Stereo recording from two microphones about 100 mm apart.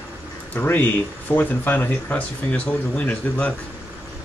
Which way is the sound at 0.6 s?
20° left (ahead or behind).